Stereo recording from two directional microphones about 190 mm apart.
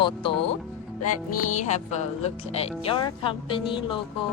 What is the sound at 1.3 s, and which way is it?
Speech, 40° left (ahead or behind).